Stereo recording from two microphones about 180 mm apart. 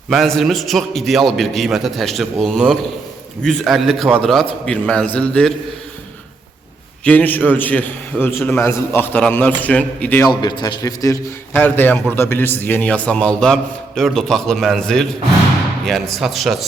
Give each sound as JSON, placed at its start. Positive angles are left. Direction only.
{"t": 0.1, "sound": "a man's voice", "side_deg": 0}
{"t": 7.0, "sound": "a man's voice", "side_deg": 10}
{"t": 10.2, "sound": "a man's voice", "side_deg": 20}